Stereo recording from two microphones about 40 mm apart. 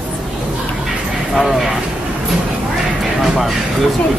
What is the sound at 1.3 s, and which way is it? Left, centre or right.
Speech, centre.